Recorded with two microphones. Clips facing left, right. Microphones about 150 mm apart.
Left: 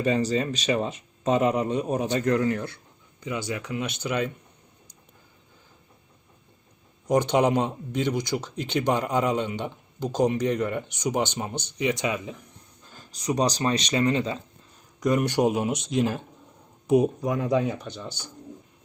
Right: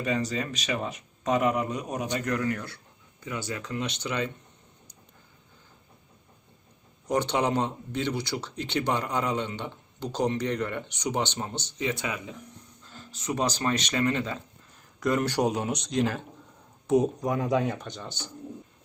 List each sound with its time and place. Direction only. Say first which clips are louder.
0.0 s speech: left 5 dB; 30° left (ahead or behind); by 4.3 s 10° left (ahead or behind)
7.1 s speech: left 5 dB; 10° left (ahead or behind)
17.2 s speech: left 2 dB; centre (ahead or behind)